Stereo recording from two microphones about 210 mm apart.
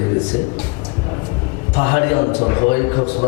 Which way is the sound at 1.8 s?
20° left (ahead or behind).